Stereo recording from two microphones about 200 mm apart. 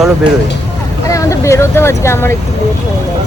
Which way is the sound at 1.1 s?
15° left (ahead or behind).